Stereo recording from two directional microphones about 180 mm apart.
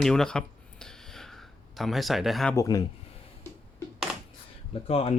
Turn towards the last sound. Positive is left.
turn(degrees=35)  # may be behind; listen again after turning